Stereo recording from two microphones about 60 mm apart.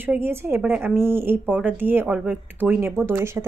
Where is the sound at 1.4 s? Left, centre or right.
Right.